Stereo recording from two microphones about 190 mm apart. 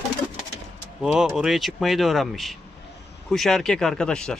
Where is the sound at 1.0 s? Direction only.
5° right (ahead or behind).